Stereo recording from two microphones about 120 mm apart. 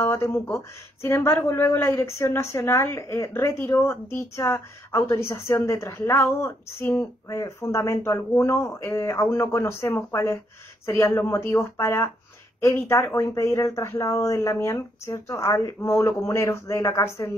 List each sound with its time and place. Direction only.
0.0 s speech: 20° left (ahead or behind)